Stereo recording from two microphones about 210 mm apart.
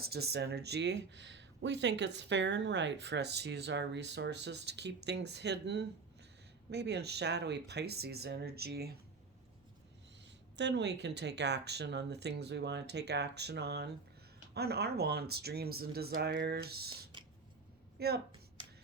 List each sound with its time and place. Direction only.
0.0 s speech: 50° right (ahead or behind)
10.6 s speech: 55° right (ahead or behind)
18.0 s speech: 50° right (ahead or behind)